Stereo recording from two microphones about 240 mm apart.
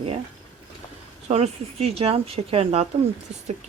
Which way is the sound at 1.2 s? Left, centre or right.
Right.